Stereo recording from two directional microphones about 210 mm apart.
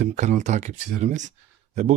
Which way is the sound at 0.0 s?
35° right (ahead or behind).